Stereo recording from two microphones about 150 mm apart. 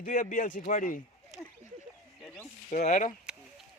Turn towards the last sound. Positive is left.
turn(degrees=55)  # may be behind; listen again after turning